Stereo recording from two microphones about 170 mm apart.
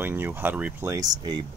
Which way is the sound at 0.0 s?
15° right (ahead or behind).